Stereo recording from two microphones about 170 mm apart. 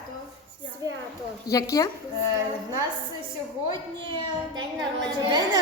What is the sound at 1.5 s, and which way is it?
Speech, 20° left (ahead or behind).